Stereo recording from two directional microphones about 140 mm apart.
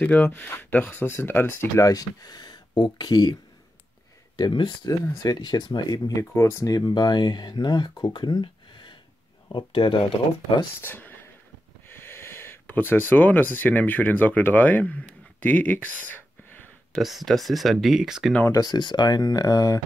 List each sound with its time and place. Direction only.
0.0 s speech: 10° left (ahead or behind); by 3.3 s 30° left (ahead or behind)
4.4 s speech: 35° left (ahead or behind)
5.0 s speech: 25° left (ahead or behind)
10.8 s speech: 15° left (ahead or behind)
17.0 s speech: centre (ahead or behind)
18.5 s speech: 30° left (ahead or behind)